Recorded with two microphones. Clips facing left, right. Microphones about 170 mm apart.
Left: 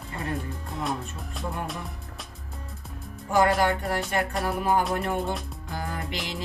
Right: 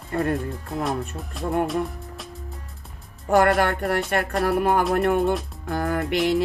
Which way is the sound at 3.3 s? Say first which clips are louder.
Right 3 dB; 65° right (ahead or behind).